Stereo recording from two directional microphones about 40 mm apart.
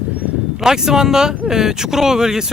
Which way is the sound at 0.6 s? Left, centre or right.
Centre.